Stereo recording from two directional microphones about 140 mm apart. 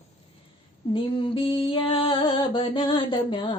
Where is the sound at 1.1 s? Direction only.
40° left (ahead or behind).